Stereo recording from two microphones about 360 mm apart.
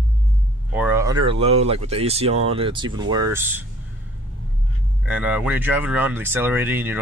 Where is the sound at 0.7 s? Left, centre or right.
Centre.